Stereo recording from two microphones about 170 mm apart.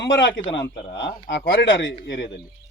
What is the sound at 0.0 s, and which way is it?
Speech, 90° left.